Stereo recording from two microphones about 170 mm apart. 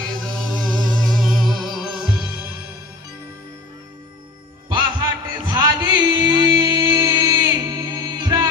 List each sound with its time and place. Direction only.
0.2 s music: centre (ahead or behind)
4.7 s music: 25° right (ahead or behind)